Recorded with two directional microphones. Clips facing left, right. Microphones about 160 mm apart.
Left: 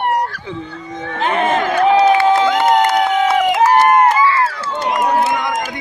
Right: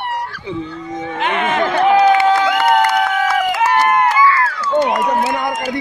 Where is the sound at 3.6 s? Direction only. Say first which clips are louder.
Left 4 dB; 35° left (ahead or behind).